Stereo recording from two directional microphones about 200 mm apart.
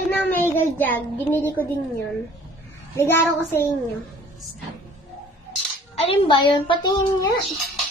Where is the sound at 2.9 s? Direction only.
10° left (ahead or behind).